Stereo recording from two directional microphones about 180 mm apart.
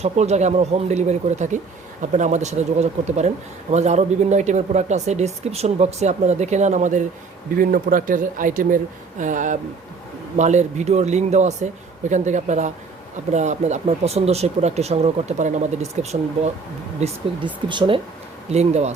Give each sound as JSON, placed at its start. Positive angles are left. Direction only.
{"t": 0.0, "sound": "speech", "side_deg": -40}
{"t": 17.0, "sound": "speech", "side_deg": -25}